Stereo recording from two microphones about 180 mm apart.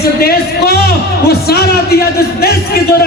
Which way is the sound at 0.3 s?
60° left (ahead or behind).